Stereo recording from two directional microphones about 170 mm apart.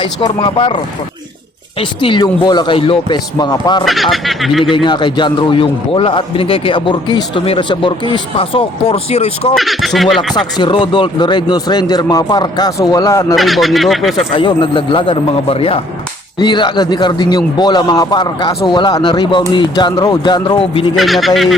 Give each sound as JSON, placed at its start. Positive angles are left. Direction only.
{"t": 0.0, "sound": "a man's voice", "side_deg": 30}
{"t": 1.8, "sound": "a man's voice", "side_deg": 30}
{"t": 3.8, "sound": "speech", "side_deg": 0}
{"t": 4.6, "sound": "a man's voice", "side_deg": 30}
{"t": 9.6, "sound": "speech", "side_deg": 0}
{"t": 10.3, "sound": "a man's voice", "side_deg": 30}
{"t": 13.3, "sound": "speech", "side_deg": 0}
{"t": 14.3, "sound": "a man's voice", "side_deg": 30}
{"t": 20.9, "sound": "speech", "side_deg": 0}